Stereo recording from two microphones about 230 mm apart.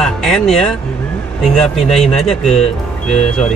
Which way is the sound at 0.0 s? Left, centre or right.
Centre.